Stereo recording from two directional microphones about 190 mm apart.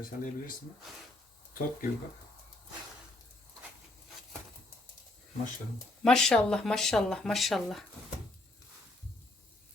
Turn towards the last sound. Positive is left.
turn(degrees=0)  # may be behind; listen again after turning